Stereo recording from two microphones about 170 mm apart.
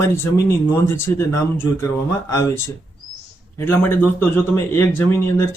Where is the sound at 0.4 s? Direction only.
15° left (ahead or behind).